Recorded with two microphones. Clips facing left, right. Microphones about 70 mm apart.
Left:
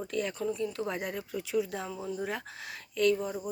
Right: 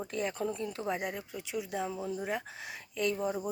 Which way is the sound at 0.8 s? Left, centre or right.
Centre.